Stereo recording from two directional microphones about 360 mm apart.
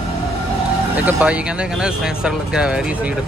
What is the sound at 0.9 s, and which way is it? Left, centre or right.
Speech, centre.